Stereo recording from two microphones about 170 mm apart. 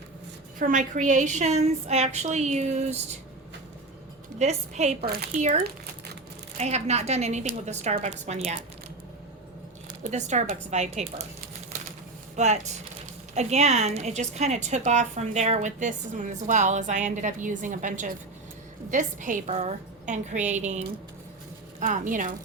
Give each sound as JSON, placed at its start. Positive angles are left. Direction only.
{"t": 0.6, "sound": "a woman's voice", "side_deg": -50}
{"t": 4.4, "sound": "a woman's voice", "side_deg": -40}
{"t": 5.0, "sound": "speech", "side_deg": -70}
{"t": 5.3, "sound": "a woman's voice", "side_deg": -40}
{"t": 10.0, "sound": "a woman's voice", "side_deg": -45}
{"t": 12.4, "sound": "a woman's voice", "side_deg": -40}